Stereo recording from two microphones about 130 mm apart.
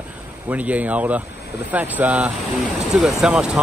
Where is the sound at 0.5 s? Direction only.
10° right (ahead or behind).